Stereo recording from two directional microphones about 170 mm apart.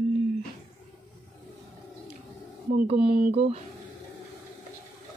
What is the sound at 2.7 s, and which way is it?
Speech, 35° right (ahead or behind).